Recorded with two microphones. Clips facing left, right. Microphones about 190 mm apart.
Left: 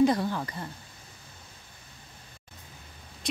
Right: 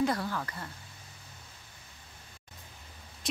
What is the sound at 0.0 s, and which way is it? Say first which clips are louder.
Speech: left 6 dB; 20° left (ahead or behind).